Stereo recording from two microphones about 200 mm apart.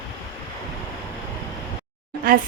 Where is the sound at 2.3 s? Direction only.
45° right (ahead or behind).